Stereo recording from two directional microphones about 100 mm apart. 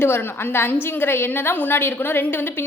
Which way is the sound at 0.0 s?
20° left (ahead or behind).